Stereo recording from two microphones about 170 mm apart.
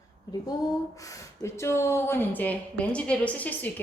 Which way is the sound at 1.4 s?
15° left (ahead or behind).